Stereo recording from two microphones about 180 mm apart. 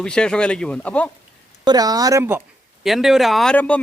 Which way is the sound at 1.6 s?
20° right (ahead or behind).